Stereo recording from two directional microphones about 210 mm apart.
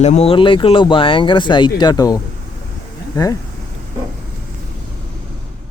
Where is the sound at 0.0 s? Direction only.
30° left (ahead or behind).